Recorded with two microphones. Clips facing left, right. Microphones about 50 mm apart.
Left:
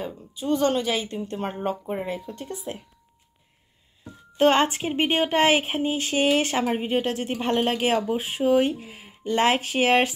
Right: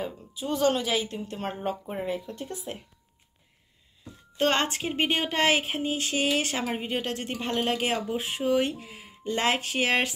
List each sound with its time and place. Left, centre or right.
0.0 s speech: centre
4.4 s speech: centre
6.6 s speech: centre
7.3 s speech: left
8.1 s speech: centre